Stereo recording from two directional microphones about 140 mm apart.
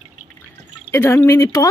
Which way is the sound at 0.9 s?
15° left (ahead or behind).